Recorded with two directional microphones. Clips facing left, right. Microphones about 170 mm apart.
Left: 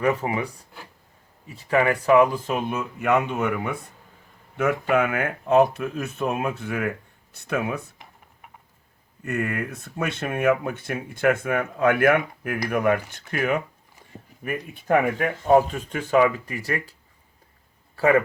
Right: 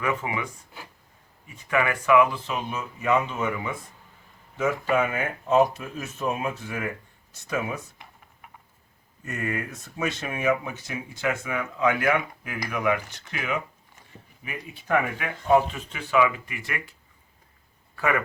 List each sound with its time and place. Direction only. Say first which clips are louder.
0.0 s speech: left 5 dB; 40° left (ahead or behind); by 7.9 s 60° left (ahead or behind)
9.2 s speech: left 4 dB; 60° left (ahead or behind); by 16.9 s 35° left (ahead or behind)
17.9 s speech: left 7 dB; 30° left (ahead or behind)